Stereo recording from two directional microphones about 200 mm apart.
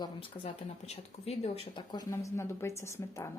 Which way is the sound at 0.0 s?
30° left (ahead or behind).